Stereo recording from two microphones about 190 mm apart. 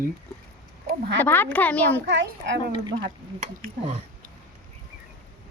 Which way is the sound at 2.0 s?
65° right (ahead or behind).